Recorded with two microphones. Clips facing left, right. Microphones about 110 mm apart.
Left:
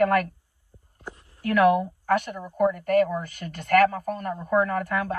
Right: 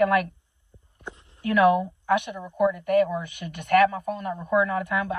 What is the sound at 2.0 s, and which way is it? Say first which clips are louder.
A woman's voice: even; 45° left (ahead or behind).